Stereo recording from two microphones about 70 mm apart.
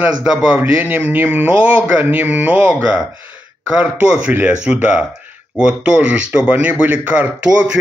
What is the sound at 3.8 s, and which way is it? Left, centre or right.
Speech, centre.